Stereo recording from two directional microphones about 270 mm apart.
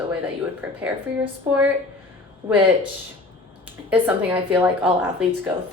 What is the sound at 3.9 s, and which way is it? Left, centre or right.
Speech, centre.